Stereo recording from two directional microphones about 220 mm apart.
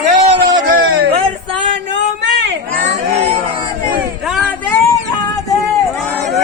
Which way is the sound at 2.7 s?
35° right (ahead or behind).